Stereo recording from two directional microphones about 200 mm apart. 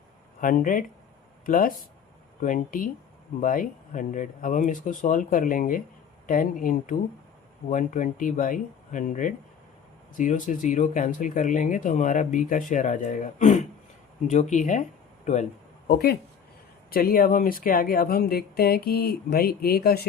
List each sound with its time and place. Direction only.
0.4 s speech: 40° left (ahead or behind)
15.9 s speech: 50° left (ahead or behind)